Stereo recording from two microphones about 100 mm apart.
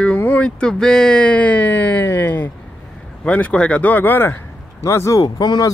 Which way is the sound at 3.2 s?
10° left (ahead or behind).